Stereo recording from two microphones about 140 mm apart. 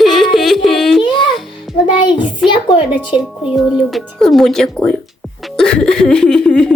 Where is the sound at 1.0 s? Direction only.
35° left (ahead or behind).